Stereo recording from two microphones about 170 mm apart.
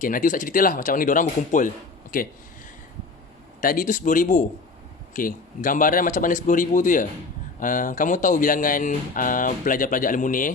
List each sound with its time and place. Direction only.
0.0 s speech: 55° left (ahead or behind)
3.6 s speech: 55° left (ahead or behind)